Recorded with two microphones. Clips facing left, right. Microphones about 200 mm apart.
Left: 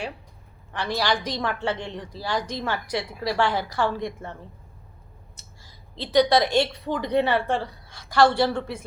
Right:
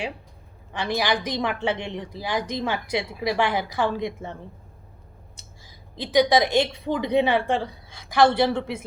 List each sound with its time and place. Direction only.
0.7 s a woman's voice: 15° right (ahead or behind)
6.0 s a woman's voice: 15° right (ahead or behind)